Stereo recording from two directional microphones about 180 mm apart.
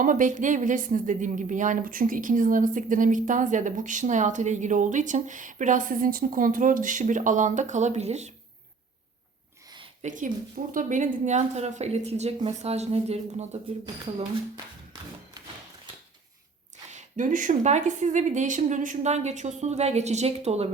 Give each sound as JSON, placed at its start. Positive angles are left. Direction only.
{"t": 0.0, "sound": "a woman's voice", "side_deg": -45}
{"t": 10.0, "sound": "speech", "side_deg": -45}
{"t": 13.8, "sound": "speech", "side_deg": -25}
{"t": 15.4, "sound": "a sound", "side_deg": -20}
{"t": 16.9, "sound": "speech", "side_deg": -45}